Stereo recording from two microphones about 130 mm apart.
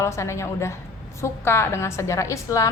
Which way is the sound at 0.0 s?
20° left (ahead or behind).